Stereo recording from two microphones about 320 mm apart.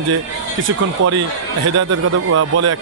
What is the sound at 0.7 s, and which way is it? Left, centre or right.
Speech, right.